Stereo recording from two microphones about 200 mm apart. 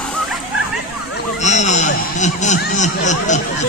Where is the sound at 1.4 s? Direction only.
35° left (ahead or behind).